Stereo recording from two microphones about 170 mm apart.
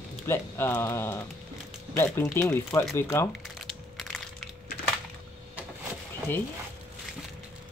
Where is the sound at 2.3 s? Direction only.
15° left (ahead or behind).